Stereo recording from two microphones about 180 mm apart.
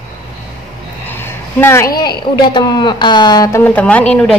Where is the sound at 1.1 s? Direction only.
10° left (ahead or behind).